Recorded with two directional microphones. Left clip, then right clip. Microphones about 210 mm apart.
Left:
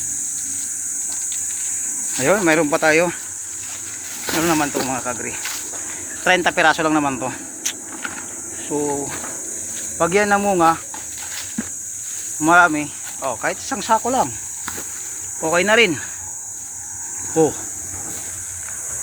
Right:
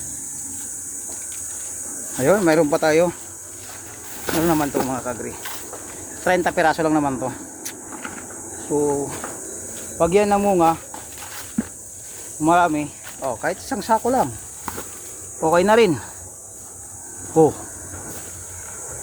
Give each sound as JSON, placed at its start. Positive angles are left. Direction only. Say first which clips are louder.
{"t": 2.1, "sound": "speech", "louder": "even", "side_deg": -5}
{"t": 4.3, "sound": "speech", "louder": "left 1 dB", "side_deg": 0}
{"t": 8.7, "sound": "speech", "louder": "right 2 dB", "side_deg": 5}
{"t": 11.6, "sound": "walk", "louder": "right 4 dB", "side_deg": -10}
{"t": 12.4, "sound": "speech", "louder": "left 3 dB", "side_deg": -5}
{"t": 13.4, "sound": "speech", "louder": "left 2 dB", "side_deg": -15}
{"t": 14.0, "sound": "speech", "louder": "even", "side_deg": -5}
{"t": 15.5, "sound": "speech", "louder": "even", "side_deg": -25}